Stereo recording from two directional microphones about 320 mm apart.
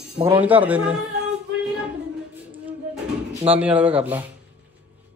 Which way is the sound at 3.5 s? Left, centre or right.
Centre.